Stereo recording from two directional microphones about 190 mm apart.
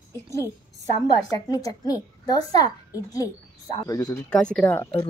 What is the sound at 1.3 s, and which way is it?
A child's voice, 20° left (ahead or behind).